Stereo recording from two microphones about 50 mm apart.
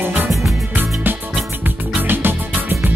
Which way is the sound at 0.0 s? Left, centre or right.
Right.